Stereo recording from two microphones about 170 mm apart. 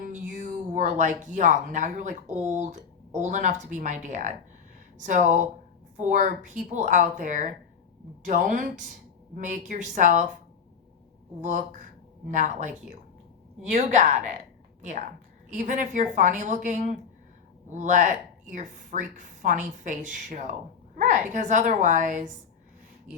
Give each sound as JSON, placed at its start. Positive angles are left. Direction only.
{"t": 0.0, "sound": "a woman's voice", "side_deg": -50}
{"t": 11.3, "sound": "a woman's voice", "side_deg": -50}